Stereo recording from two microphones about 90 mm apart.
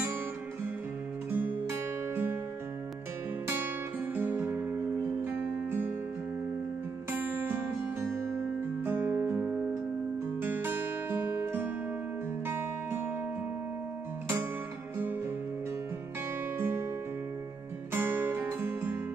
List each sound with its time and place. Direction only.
1.3 s music: 20° right (ahead or behind)
4.1 s music: 20° right (ahead or behind)
7.1 s music: 25° right (ahead or behind)
16.5 s music: 30° right (ahead or behind)
17.9 s guitar: 25° right (ahead or behind)